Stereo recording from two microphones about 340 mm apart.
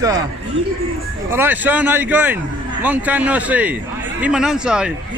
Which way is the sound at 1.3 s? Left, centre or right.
Centre.